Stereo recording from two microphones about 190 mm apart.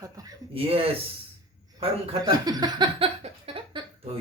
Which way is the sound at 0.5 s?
30° right (ahead or behind).